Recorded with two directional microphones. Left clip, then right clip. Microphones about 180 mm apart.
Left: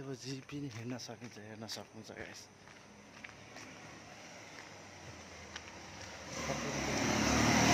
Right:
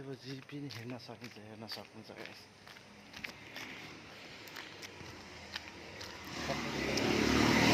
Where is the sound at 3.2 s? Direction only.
60° right (ahead or behind).